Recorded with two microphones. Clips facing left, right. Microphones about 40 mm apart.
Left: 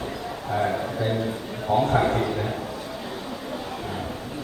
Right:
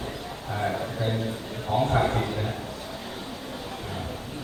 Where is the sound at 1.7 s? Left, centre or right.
Centre.